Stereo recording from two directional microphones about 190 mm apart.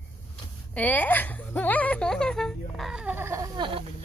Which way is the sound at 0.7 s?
10° left (ahead or behind).